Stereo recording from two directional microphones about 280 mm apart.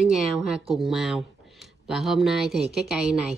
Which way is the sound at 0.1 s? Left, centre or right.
Centre.